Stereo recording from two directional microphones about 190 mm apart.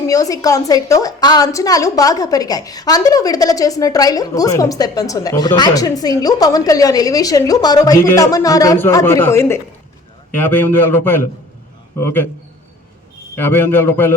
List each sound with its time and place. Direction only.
0.1 s a woman's voice: 20° left (ahead or behind)
13.3 s a man's voice: 10° left (ahead or behind)